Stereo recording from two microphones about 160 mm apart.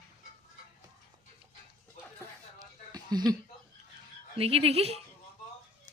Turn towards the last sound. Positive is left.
turn(degrees=-40)  # may be behind; listen again after turning